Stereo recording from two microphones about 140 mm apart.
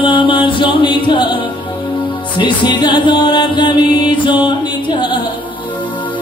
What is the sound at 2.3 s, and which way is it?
Music, 35° left (ahead or behind).